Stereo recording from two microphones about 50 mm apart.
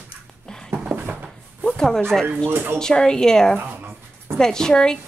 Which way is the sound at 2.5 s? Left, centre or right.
Right.